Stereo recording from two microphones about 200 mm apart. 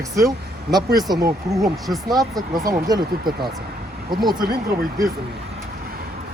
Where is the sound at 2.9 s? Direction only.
20° right (ahead or behind).